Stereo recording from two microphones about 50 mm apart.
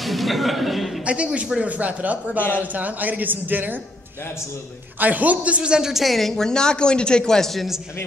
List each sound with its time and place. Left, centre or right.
0.0 s speech: centre
1.0 s a man's voice: right
4.9 s a woman's voice: right; by 7.6 s centre